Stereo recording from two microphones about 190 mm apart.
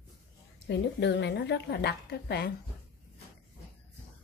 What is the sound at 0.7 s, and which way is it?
A woman's voice, 65° left (ahead or behind).